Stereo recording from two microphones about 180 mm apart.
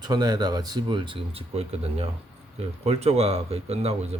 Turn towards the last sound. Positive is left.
turn(degrees=-35)  # may be behind; listen again after turning